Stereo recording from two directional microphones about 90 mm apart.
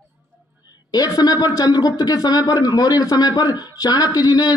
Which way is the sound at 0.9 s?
45° left (ahead or behind).